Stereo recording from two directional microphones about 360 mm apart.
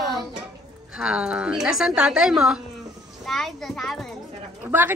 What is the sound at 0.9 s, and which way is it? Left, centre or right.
A woman's voice, centre.